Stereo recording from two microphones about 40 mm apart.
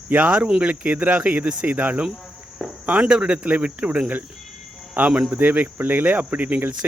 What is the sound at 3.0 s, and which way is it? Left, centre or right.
Speech, right.